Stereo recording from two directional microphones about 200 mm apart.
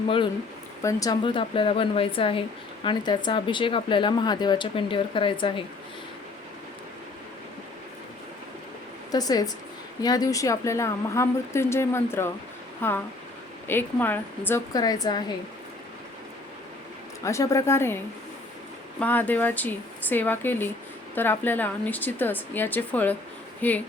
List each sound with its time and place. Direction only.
0.8 s speech: 15° left (ahead or behind)
9.1 s speech: 20° left (ahead or behind)
17.2 s speech: 15° left (ahead or behind)